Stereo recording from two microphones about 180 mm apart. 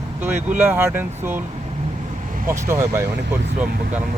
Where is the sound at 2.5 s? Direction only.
15° right (ahead or behind).